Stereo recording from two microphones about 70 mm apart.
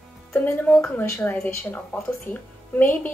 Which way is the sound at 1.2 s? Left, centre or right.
Left.